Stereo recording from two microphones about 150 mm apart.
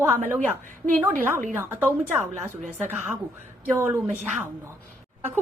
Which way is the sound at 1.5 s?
15° right (ahead or behind).